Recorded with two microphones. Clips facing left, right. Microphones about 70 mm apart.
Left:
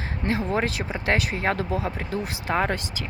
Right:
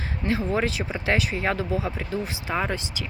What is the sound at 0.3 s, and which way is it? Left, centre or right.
Speech, left.